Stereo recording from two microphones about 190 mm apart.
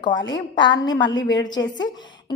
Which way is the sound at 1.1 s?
70° left (ahead or behind).